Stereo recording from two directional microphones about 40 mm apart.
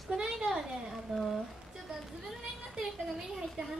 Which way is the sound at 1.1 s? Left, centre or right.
Centre.